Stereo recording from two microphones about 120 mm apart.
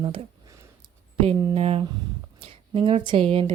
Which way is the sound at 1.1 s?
55° right (ahead or behind).